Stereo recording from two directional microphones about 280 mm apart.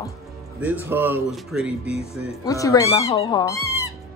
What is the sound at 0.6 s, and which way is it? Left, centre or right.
Speech, centre.